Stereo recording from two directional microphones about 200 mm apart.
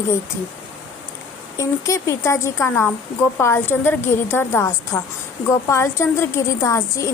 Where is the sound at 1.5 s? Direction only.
15° left (ahead or behind).